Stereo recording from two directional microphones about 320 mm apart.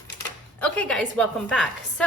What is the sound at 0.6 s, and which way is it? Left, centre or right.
A woman's voice, centre.